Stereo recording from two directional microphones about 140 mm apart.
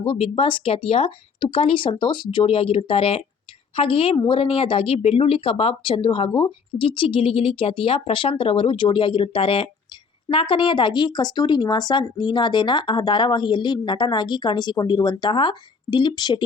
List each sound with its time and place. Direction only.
0.0 s speech: 40° left (ahead or behind)